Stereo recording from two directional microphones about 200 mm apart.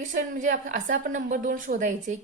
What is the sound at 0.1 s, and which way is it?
A woman's voice, 40° right (ahead or behind).